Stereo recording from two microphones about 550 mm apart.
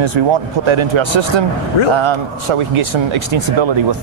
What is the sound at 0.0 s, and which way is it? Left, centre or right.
Speech, right.